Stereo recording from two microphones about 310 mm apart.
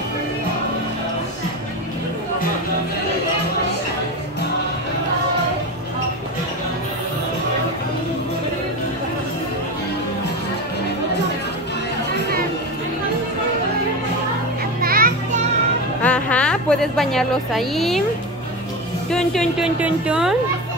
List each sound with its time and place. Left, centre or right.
14.8 s children playing: right
16.0 s a woman's voice: centre
19.0 s a woman's voice: centre